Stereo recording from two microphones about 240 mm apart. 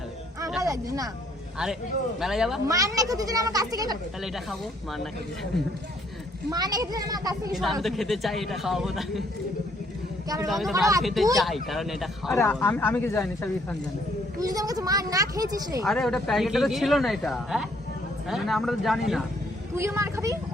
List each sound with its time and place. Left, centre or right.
0.6 s speech: centre
2.2 s a man's voice: centre
2.6 s speech: centre
4.2 s a man's voice: centre
6.5 s speech: centre
7.5 s a man's voice: centre
10.4 s a man's voice: centre
10.8 s speech: centre
11.0 s a man's voice: centre
12.3 s speech: centre
14.3 s speech: centre
15.9 s a man's voice: centre